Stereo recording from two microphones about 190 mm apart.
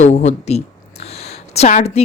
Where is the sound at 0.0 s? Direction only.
35° left (ahead or behind).